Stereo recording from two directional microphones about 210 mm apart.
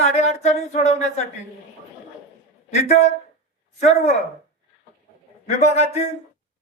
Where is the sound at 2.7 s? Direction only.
35° left (ahead or behind).